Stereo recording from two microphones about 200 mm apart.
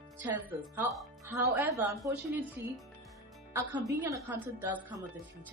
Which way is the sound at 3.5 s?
10° right (ahead or behind).